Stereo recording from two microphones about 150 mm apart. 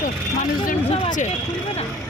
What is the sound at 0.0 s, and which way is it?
Vehicle, 60° left (ahead or behind).